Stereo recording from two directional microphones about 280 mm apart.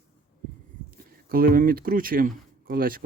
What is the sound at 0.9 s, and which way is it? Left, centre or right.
Speech, right.